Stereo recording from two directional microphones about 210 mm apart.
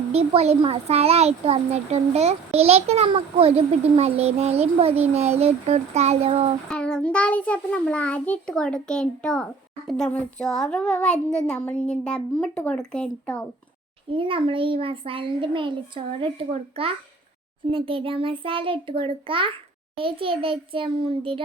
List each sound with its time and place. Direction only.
0.1 s speech: 30° right (ahead or behind)
6.7 s a child's voice: 5° left (ahead or behind)
14.1 s speech: 25° right (ahead or behind)